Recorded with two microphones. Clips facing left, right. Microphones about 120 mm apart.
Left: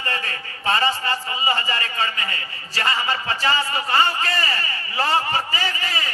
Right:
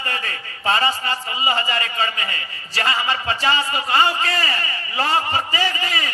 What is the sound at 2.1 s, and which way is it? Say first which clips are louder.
Speech: right 1 dB; 35° left (ahead or behind).